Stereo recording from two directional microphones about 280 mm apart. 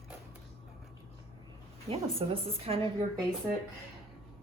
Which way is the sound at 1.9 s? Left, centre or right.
Right.